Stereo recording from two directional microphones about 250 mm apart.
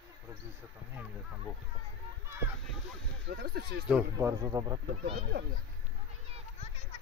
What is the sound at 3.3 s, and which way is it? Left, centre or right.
Speech, right.